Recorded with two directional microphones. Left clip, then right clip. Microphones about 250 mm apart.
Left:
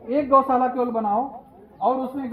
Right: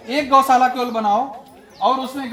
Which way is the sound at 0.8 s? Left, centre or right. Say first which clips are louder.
Right 4 dB; centre.